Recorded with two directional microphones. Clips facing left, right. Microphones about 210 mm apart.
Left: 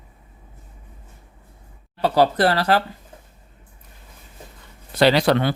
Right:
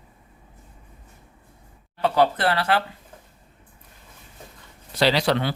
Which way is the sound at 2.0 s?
35° left (ahead or behind).